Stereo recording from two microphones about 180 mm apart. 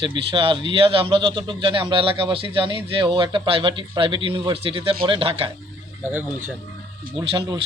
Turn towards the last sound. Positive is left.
turn(degrees=-25)  # may be behind; listen again after turning